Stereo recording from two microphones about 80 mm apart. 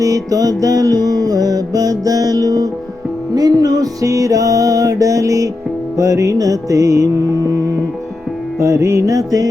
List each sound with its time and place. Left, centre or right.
0.0 s music: right